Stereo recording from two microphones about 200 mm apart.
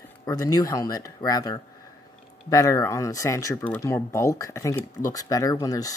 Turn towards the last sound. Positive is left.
turn(degrees=20)  # may be behind; listen again after turning